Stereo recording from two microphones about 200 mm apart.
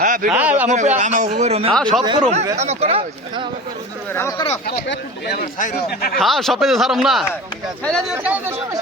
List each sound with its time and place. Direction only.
0.0 s a sound: 40° right (ahead or behind)
0.3 s speech: 10° right (ahead or behind)
0.7 s a man's voice: 35° right (ahead or behind)
1.7 s speech: 5° left (ahead or behind)
2.6 s a man's voice: 30° right (ahead or behind)
4.1 s speech: 15° left (ahead or behind)
4.6 s speech: 55° left (ahead or behind)
6.1 s speech: centre (ahead or behind)